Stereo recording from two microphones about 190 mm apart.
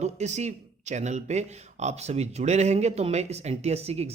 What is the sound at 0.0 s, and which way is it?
Speech, 35° right (ahead or behind).